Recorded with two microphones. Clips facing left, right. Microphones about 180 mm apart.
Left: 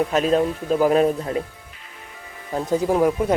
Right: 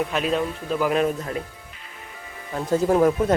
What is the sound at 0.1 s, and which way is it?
A man's voice, 40° left (ahead or behind).